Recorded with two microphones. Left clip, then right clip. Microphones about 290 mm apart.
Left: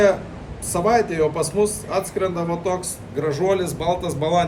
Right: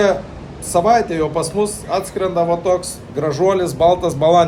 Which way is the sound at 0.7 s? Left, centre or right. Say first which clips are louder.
Right 5 dB; centre.